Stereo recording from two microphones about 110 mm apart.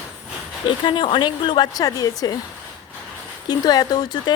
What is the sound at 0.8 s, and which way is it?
A woman's voice, 50° left (ahead or behind).